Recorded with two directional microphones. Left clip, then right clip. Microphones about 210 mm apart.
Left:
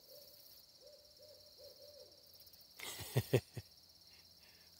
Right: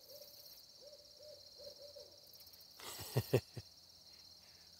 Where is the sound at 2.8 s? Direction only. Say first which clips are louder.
Left 1 dB; 20° left (ahead or behind).